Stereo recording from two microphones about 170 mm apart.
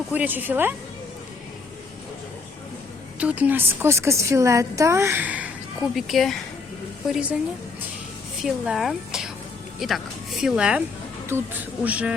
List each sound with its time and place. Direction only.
0.1 s a woman's voice: 10° right (ahead or behind)
3.2 s a woman's voice: 10° right (ahead or behind)
8.4 s a woman's voice: centre (ahead or behind)